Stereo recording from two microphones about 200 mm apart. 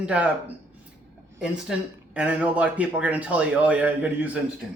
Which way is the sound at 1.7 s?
5° right (ahead or behind).